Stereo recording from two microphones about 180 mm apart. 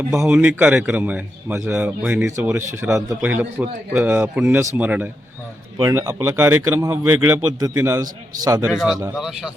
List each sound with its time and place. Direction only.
0.0 s a man's voice: 5° right (ahead or behind)
8.0 s a man's voice: 50° right (ahead or behind)
8.6 s speech: 5° right (ahead or behind)